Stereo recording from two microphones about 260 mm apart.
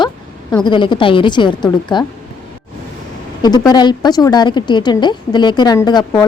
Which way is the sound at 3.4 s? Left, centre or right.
Centre.